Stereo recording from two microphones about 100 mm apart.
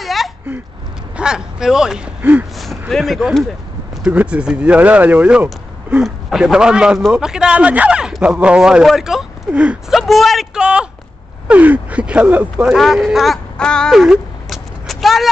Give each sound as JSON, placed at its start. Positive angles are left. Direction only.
{"t": 0.0, "sound": "a sound", "side_deg": 0}
{"t": 1.1, "sound": "speech", "side_deg": -5}
{"t": 2.9, "sound": "speech", "side_deg": 0}
{"t": 4.0, "sound": "speech", "side_deg": -10}
{"t": 9.9, "sound": "speech", "side_deg": 0}
{"t": 12.6, "sound": "speech", "side_deg": 0}
{"t": 13.9, "sound": "a sound", "side_deg": -5}